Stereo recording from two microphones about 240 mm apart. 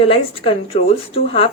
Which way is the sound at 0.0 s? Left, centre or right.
Left.